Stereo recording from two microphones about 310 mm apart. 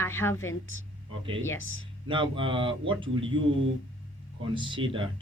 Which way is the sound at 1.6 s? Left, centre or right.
Left.